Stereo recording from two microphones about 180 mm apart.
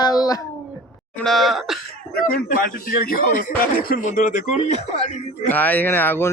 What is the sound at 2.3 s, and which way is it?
Speech, 50° left (ahead or behind).